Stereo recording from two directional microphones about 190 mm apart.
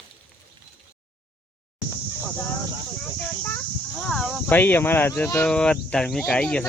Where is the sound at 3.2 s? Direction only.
10° left (ahead or behind).